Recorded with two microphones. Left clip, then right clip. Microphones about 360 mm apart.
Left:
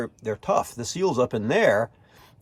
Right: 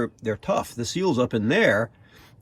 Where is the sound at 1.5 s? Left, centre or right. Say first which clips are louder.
Even; left.